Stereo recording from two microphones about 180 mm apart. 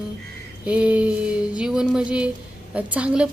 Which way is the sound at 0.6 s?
5° right (ahead or behind).